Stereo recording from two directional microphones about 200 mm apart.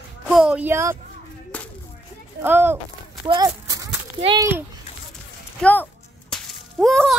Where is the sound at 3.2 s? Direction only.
20° right (ahead or behind).